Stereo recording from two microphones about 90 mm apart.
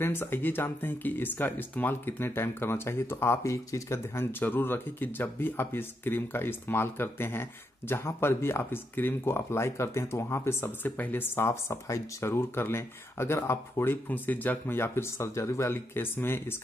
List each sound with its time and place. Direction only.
0.0 s speech: 25° left (ahead or behind)